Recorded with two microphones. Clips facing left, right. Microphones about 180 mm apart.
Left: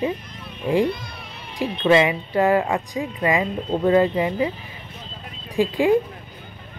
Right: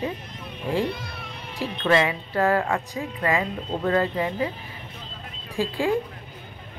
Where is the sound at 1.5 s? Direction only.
15° left (ahead or behind).